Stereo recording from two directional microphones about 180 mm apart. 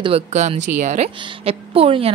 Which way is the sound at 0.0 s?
35° right (ahead or behind).